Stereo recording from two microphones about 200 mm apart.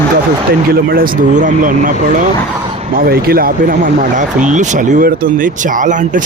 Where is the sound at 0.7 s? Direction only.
45° right (ahead or behind).